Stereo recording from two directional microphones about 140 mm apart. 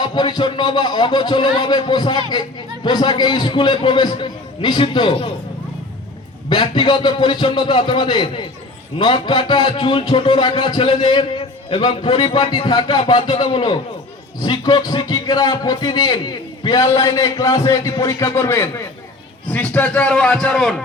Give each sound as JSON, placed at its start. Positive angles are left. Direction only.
{"t": 0.0, "sound": "a man's voice", "side_deg": 30}
{"t": 6.5, "sound": "a man's voice", "side_deg": 35}